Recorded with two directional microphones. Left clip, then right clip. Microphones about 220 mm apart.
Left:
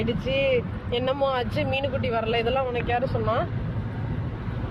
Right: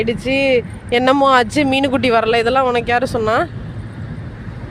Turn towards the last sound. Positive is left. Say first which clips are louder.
# right 9 dB
turn(degrees=-60)  # may be behind; listen again after turning